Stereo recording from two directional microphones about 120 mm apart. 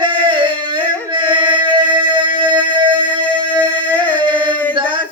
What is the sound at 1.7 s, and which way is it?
Music, 40° right (ahead or behind).